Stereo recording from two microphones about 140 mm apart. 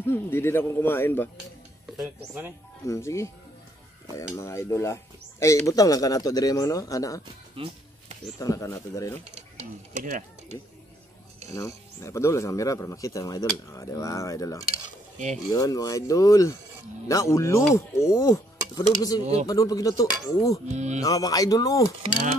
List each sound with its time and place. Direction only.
0.0 s a man's voice: 15° left (ahead or behind)
2.8 s speech: 20° left (ahead or behind)
4.4 s speech: 20° left (ahead or behind)
7.5 s music: 40° right (ahead or behind)
8.4 s speech: 20° left (ahead or behind)
9.6 s speech: 60° right (ahead or behind)
11.5 s speech: 20° left (ahead or behind)
20.7 s speech: 55° right (ahead or behind)
21.0 s speech: 25° left (ahead or behind)